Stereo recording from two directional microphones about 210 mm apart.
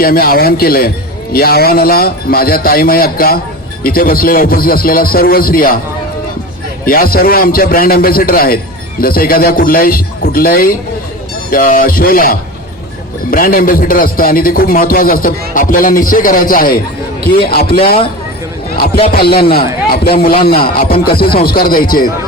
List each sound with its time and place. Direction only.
0.0 s a man's voice: 45° left (ahead or behind)
6.8 s a man's voice: 45° left (ahead or behind)
19.1 s a man's voice: 45° left (ahead or behind)